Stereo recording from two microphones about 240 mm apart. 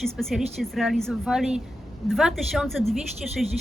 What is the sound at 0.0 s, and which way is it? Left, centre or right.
Speech, centre.